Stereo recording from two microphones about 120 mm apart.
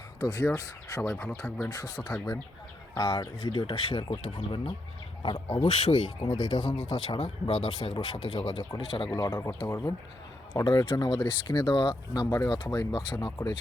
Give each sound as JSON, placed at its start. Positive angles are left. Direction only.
{"t": 0.2, "sound": "speech", "side_deg": 25}
{"t": 2.9, "sound": "speech", "side_deg": 35}
{"t": 5.2, "sound": "speech", "side_deg": 35}
{"t": 9.1, "sound": "speech", "side_deg": 25}
{"t": 10.5, "sound": "speech", "side_deg": 35}